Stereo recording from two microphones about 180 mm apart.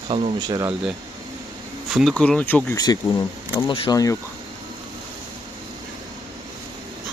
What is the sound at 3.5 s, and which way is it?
Speech, 20° left (ahead or behind).